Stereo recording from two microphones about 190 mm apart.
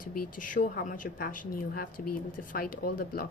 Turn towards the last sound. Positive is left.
turn(degrees=50)  # may be behind; listen again after turning